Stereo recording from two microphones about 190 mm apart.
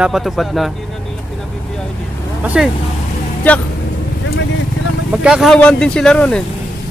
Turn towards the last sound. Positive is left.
turn(degrees=5)  # may be behind; listen again after turning